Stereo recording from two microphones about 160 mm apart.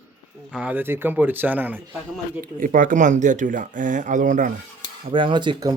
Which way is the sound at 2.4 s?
60° right (ahead or behind).